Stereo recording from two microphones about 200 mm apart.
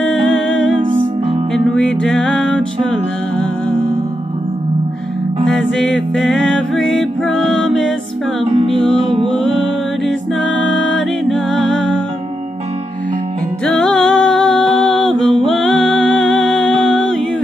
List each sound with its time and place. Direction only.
1.5 s music: centre (ahead or behind)
5.8 s music: centre (ahead or behind)
8.5 s music: 30° right (ahead or behind)
9.4 s music: centre (ahead or behind)
13.7 s music: centre (ahead or behind)